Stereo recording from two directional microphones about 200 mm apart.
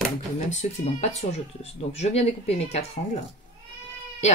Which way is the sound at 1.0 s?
35° left (ahead or behind).